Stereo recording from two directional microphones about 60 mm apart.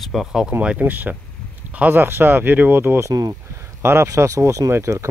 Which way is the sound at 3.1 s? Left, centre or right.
Right.